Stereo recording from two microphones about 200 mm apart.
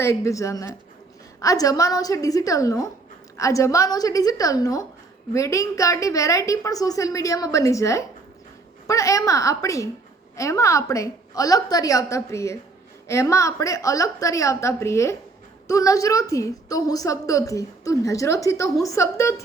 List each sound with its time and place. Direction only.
0.0 s a woman's voice: 15° left (ahead or behind)